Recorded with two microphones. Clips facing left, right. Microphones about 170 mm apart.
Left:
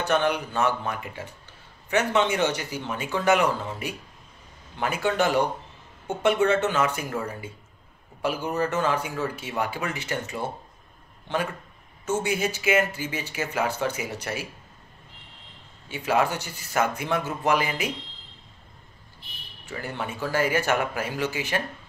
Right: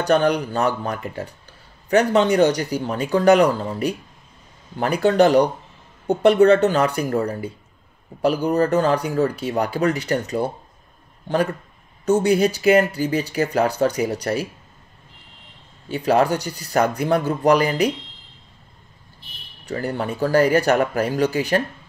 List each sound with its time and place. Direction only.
0.0 s speech: 35° right (ahead or behind)
12.1 s speech: 40° right (ahead or behind)
15.9 s speech: 40° right (ahead or behind)
19.6 s speech: 40° right (ahead or behind)